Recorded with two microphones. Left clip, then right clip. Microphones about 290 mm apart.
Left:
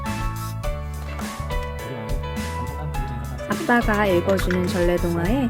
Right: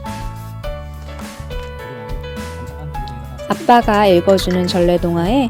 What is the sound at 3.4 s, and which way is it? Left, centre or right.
Speech, right.